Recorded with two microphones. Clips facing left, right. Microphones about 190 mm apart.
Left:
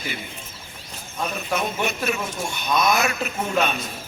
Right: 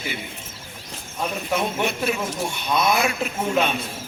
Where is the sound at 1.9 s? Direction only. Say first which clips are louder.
Right 1 dB; 30° right (ahead or behind).